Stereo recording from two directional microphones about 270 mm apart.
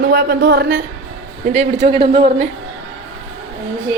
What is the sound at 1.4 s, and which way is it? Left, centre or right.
A woman's voice, right.